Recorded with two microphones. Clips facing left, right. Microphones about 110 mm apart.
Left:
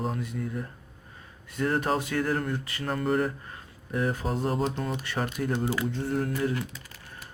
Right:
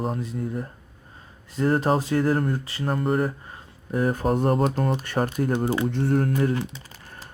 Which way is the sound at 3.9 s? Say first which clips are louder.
Right 6 dB; 45° right (ahead or behind).